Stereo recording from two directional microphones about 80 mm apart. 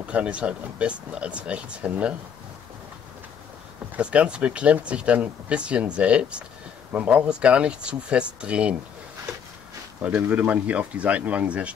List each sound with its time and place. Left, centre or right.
0.0 s speech: centre
3.9 s speech: centre
10.0 s speech: centre